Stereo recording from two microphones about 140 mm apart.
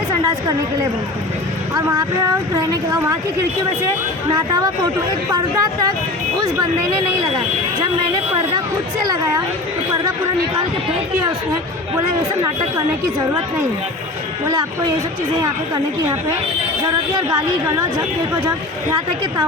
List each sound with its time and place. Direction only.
1.7 s a woman's voice: 30° right (ahead or behind)
4.4 s a woman's voice: 30° right (ahead or behind)
16.8 s a woman's voice: 30° right (ahead or behind)